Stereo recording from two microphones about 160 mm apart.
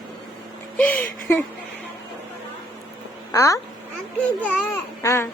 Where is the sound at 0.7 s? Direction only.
10° left (ahead or behind).